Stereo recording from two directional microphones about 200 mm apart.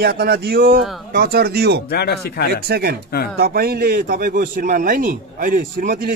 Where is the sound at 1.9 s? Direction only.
55° left (ahead or behind).